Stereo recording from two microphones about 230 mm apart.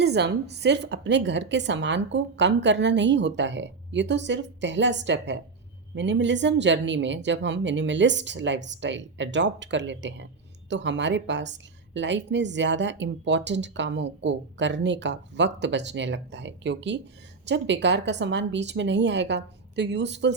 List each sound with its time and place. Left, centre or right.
0.0 s a woman's voice: right